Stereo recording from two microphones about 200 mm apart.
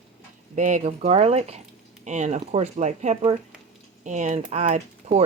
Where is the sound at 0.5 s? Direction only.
35° right (ahead or behind).